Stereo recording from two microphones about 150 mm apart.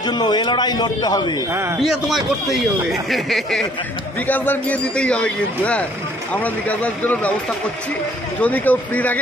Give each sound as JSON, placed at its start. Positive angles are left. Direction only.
{"t": 0.0, "sound": "a man's voice", "side_deg": 30}
{"t": 1.8, "sound": "a man's voice", "side_deg": 0}
{"t": 8.4, "sound": "a man's voice", "side_deg": 10}